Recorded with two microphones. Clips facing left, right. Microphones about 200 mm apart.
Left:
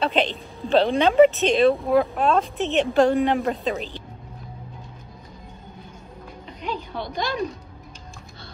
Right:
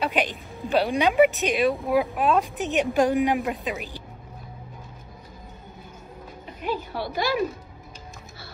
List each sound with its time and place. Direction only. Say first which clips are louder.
0.2 s speech: left 3 dB; 15° right (ahead or behind)
6.6 s music: right 2 dB; 5° right (ahead or behind)